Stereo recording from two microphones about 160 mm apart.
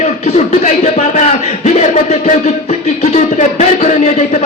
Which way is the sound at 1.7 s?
40° left (ahead or behind).